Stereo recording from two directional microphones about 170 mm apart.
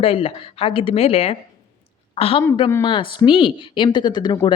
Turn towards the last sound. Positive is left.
turn(degrees=25)  # may be behind; listen again after turning